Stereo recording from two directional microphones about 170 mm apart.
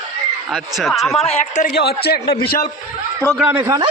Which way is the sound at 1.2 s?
40° left (ahead or behind).